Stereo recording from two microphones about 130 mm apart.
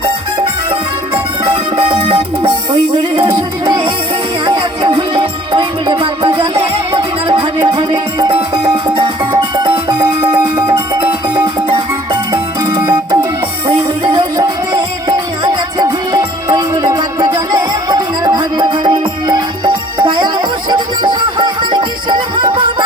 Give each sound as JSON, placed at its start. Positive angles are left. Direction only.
{"t": 1.1, "sound": "music", "side_deg": -55}
{"t": 2.0, "sound": "music", "side_deg": -40}
{"t": 4.8, "sound": "music", "side_deg": -45}
{"t": 7.7, "sound": "music", "side_deg": -30}
{"t": 13.7, "sound": "music", "side_deg": -40}
{"t": 15.8, "sound": "music", "side_deg": -25}